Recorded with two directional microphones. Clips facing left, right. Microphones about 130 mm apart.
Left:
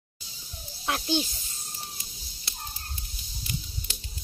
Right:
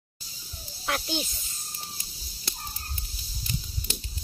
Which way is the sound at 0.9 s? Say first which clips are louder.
Left 3 dB; 30° left (ahead or behind).